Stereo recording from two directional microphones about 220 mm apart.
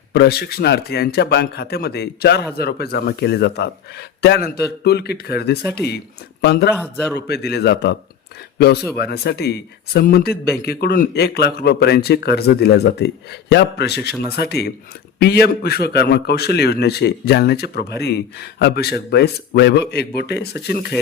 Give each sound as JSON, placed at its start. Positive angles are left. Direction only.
{"t": 0.1, "sound": "a man's voice", "side_deg": 45}